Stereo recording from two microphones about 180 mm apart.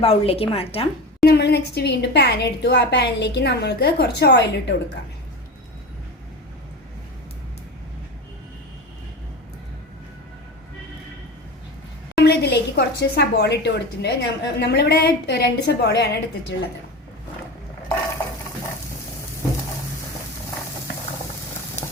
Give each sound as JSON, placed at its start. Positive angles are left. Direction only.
{"t": 0.0, "sound": "a woman's voice", "side_deg": 35}
{"t": 1.2, "sound": "a woman's voice", "side_deg": 65}
{"t": 12.2, "sound": "a woman's voice", "side_deg": 65}